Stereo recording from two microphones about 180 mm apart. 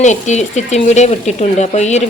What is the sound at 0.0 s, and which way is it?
Speech, 40° left (ahead or behind).